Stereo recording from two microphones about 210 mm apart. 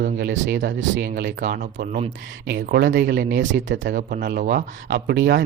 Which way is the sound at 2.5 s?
50° right (ahead or behind).